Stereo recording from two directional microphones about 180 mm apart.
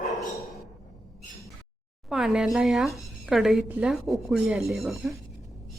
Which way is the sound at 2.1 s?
5° right (ahead or behind).